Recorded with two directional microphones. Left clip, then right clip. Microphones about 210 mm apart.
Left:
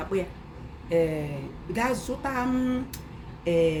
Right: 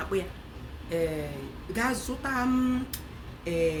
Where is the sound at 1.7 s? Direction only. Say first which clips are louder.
Left 2 dB; 5° left (ahead or behind).